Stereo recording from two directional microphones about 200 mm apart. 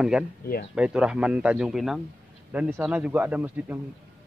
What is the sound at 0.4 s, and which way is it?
Speech, 50° left (ahead or behind).